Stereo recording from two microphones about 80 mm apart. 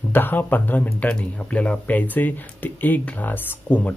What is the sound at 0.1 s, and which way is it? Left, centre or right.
Speech, left.